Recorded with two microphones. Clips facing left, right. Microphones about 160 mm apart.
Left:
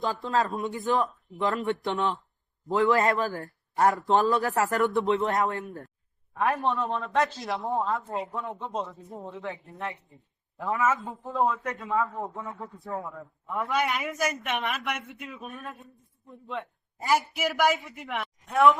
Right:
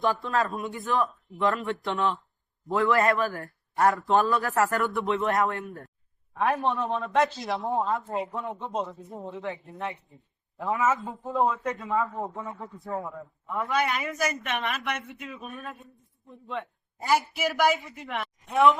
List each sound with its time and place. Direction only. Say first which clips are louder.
0.0 s speech: right 1 dB; 20° left (ahead or behind)
6.4 s a man's voice: right 1 dB; centre (ahead or behind)
13.6 s a man's voice: right 1 dB; 5° left (ahead or behind)
14.2 s a woman's voice: even; 15° left (ahead or behind)
14.7 s a man's voice: even; 5° left (ahead or behind)